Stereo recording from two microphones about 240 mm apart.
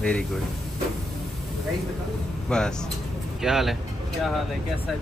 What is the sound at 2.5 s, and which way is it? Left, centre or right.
A man's voice, centre.